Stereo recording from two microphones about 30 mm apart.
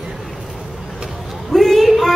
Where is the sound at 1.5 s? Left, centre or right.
Centre.